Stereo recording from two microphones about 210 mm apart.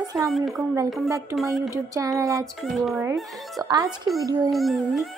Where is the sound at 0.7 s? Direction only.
15° right (ahead or behind).